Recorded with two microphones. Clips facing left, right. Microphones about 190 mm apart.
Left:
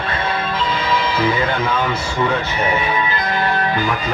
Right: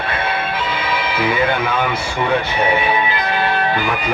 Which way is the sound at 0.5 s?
60° right (ahead or behind).